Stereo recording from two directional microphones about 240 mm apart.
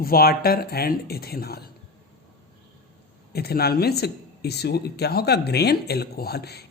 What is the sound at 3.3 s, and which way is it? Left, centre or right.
Speech, left.